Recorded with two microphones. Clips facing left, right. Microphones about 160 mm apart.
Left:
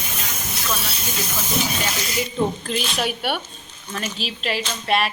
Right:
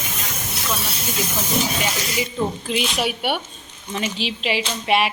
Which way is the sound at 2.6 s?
10° right (ahead or behind).